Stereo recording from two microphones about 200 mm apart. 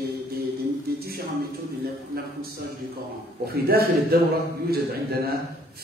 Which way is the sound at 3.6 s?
50° right (ahead or behind).